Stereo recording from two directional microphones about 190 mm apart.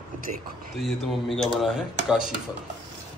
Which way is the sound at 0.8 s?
Centre (ahead or behind).